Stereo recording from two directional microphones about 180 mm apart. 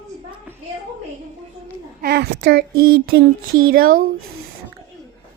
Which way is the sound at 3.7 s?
55° right (ahead or behind).